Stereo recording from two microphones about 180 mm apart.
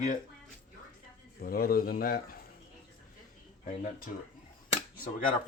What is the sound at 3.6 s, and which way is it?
Speech, 50° left (ahead or behind).